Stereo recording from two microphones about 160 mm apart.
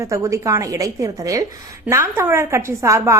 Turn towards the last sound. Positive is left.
turn(degrees=-20)  # may be behind; listen again after turning